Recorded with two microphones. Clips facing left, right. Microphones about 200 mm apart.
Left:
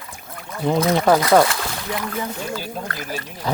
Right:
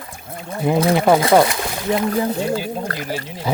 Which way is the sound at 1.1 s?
25° right (ahead or behind).